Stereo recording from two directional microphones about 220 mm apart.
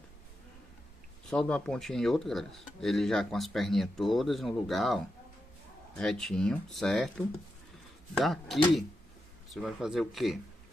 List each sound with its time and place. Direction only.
1.3 s speech: 5° left (ahead or behind)
8.2 s speech: centre (ahead or behind)